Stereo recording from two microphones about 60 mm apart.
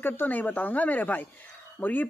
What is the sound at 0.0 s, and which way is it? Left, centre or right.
Speech, left.